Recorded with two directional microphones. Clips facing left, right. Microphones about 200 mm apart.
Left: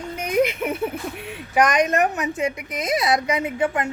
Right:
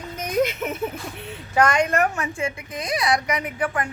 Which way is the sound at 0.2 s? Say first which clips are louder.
Left 2 dB; 10° left (ahead or behind).